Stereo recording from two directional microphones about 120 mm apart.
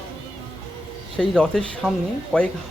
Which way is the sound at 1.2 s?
5° left (ahead or behind).